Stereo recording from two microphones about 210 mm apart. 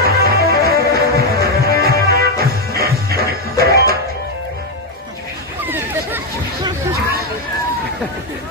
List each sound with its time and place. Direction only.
0.0 s music: 45° right (ahead or behind)
5.7 s chatter: 10° right (ahead or behind)